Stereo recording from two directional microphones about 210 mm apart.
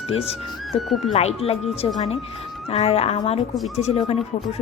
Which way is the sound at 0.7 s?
Centre (ahead or behind).